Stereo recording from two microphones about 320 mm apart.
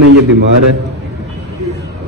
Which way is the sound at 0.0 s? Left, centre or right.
Right.